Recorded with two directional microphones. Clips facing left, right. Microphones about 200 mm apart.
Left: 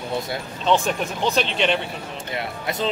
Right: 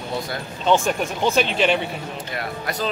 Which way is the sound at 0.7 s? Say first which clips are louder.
Right 1 dB; centre (ahead or behind).